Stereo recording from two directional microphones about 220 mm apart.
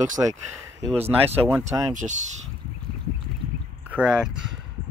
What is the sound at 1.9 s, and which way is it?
Speech, 35° right (ahead or behind).